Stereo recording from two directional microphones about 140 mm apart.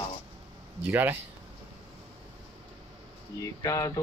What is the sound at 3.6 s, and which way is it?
Speech, 25° left (ahead or behind).